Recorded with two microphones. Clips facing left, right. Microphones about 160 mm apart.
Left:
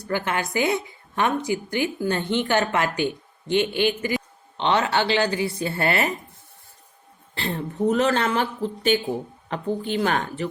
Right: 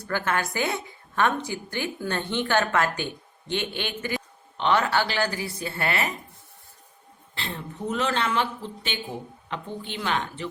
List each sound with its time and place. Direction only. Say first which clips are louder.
0.1 s a woman's voice: left 2 dB; 15° left (ahead or behind)
4.5 s a woman's voice: left 1 dB; 25° left (ahead or behind)
7.3 s a woman's voice: left 8 dB; 40° left (ahead or behind)